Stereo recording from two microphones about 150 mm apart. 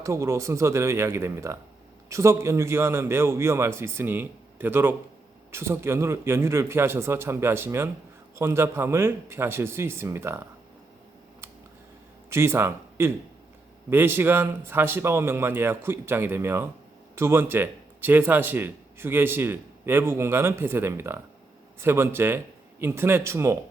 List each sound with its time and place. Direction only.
0.0 s speech: 20° right (ahead or behind)
12.3 s speech: 15° right (ahead or behind)